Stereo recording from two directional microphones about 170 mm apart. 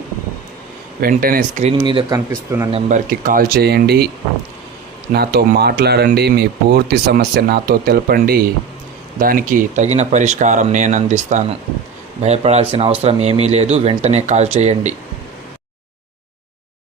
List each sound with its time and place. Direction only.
1.0 s speech: 60° right (ahead or behind)
1.8 s speech: 30° right (ahead or behind)
3.1 s speech: 55° right (ahead or behind)
5.1 s speech: 70° right (ahead or behind); by 14.9 s 40° right (ahead or behind)